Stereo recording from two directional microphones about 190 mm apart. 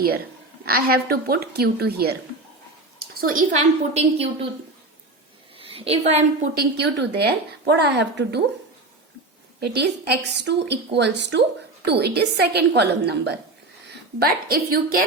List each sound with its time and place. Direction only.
0.6 s a woman's voice: 55° right (ahead or behind)
3.2 s a woman's voice: 45° right (ahead or behind)
5.5 s a woman's voice: 30° right (ahead or behind)
6.6 s a woman's voice: 60° right (ahead or behind)
9.6 s a woman's voice: 60° right (ahead or behind)